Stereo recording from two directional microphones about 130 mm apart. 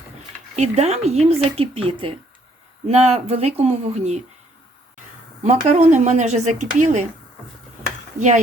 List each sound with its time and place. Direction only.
0.5 s speech: 60° right (ahead or behind)
5.4 s speech: 60° right (ahead or behind)